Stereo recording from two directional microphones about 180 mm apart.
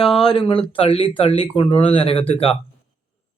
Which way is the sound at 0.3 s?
30° left (ahead or behind).